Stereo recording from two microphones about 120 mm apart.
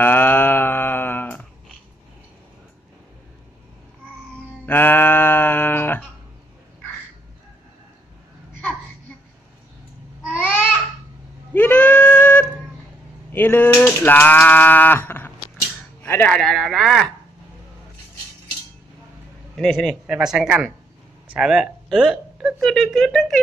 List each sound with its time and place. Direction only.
0.0 s a sound: 15° left (ahead or behind)
4.6 s music: 15° left (ahead or behind)
10.3 s babbling: 15° left (ahead or behind)
11.5 s goat: 15° left (ahead or behind)
13.3 s a sound: 15° left (ahead or behind)
16.0 s speech: 15° left (ahead or behind)
16.3 s speech: centre (ahead or behind)
19.5 s speech: 5° left (ahead or behind)